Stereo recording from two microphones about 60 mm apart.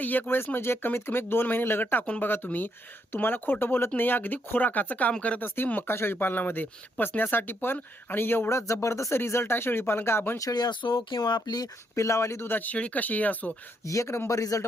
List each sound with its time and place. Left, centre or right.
0.0 s speech: left
10.3 s speech: left
11.2 s speech: left
12.5 s speech: left
13.8 s speech: left